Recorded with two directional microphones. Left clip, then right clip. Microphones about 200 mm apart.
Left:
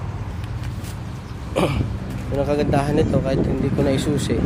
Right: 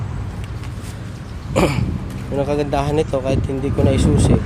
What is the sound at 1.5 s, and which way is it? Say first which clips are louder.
Speech: right 4 dB; 15° right (ahead or behind).